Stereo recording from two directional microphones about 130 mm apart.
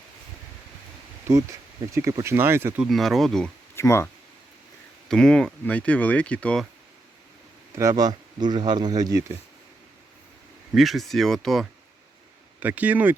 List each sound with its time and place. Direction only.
1.3 s speech: 25° right (ahead or behind)
2.8 s speech: centre (ahead or behind)
3.8 s speech: 20° left (ahead or behind)
5.0 s speech: 5° left (ahead or behind)
7.8 s speech: 25° right (ahead or behind)
10.8 s speech: centre (ahead or behind)
12.5 s speech: 10° right (ahead or behind)